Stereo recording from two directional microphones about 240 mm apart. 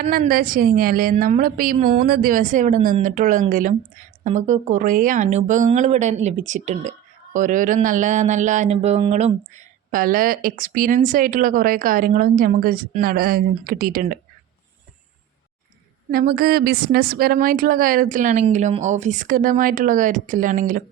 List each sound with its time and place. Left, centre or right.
0.0 s a woman's voice: right
16.1 s a woman's voice: right